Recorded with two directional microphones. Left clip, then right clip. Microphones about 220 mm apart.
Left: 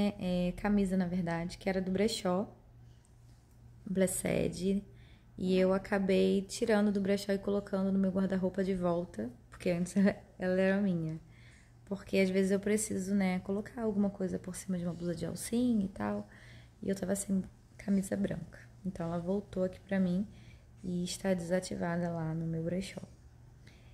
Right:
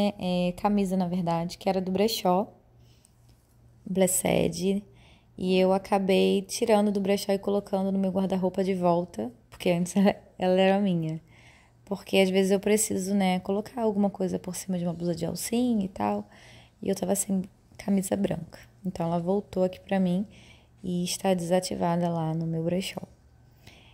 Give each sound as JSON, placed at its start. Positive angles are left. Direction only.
{"t": 0.0, "sound": "a woman's voice", "side_deg": -20}
{"t": 3.9, "sound": "a woman's voice", "side_deg": -25}